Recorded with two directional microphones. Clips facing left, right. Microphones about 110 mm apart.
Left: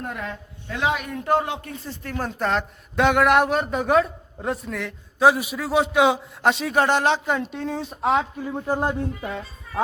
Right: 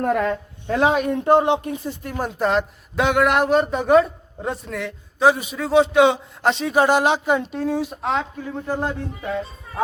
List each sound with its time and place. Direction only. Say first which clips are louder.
0.0 s speech: right 11 dB; 60° right (ahead or behind)
0.7 s a man's voice: right 7 dB; 35° right (ahead or behind); by 7.9 s 5° right (ahead or behind)
8.0 s speech: left 2 dB; 10° left (ahead or behind)